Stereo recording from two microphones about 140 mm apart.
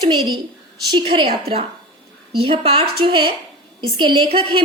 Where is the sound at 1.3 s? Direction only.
45° right (ahead or behind).